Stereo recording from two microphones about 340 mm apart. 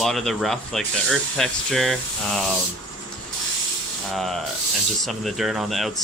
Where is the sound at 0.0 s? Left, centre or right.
Centre.